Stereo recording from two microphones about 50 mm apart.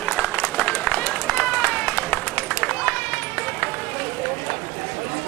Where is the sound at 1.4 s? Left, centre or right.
Left.